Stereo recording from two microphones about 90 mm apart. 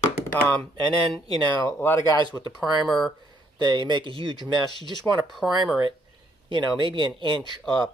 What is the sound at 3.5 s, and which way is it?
Speech, 55° right (ahead or behind).